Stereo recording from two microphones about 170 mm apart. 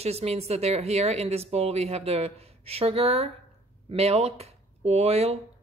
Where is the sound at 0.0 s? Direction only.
40° right (ahead or behind).